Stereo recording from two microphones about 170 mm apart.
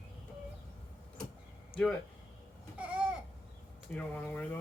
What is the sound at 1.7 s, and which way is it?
Speech, 30° left (ahead or behind).